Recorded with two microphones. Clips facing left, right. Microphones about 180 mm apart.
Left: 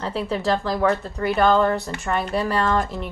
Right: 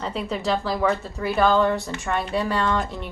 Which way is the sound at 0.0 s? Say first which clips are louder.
Left 2 dB; centre (ahead or behind).